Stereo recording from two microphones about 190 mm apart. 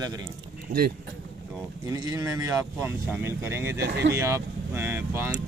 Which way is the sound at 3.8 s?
60° right (ahead or behind).